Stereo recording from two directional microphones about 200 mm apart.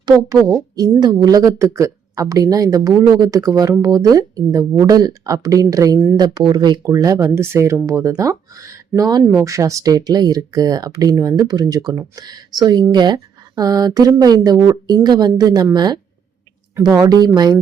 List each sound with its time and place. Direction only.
0.0 s speech: 20° right (ahead or behind)